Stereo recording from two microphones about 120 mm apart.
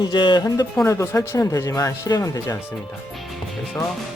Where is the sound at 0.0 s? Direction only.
40° left (ahead or behind).